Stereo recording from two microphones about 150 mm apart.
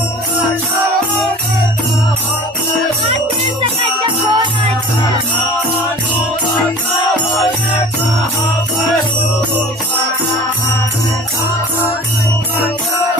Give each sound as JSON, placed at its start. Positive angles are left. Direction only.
{"t": 3.6, "sound": "music", "side_deg": -30}